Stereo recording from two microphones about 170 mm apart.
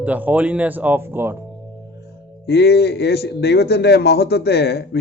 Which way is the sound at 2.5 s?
75° left (ahead or behind).